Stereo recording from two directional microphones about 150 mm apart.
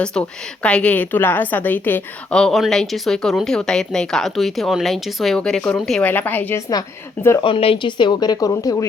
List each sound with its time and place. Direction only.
0.0 s a woman's voice: 5° left (ahead or behind)
7.4 s speech: 35° left (ahead or behind)